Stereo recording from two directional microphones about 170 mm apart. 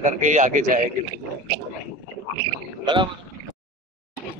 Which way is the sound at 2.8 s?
25° right (ahead or behind).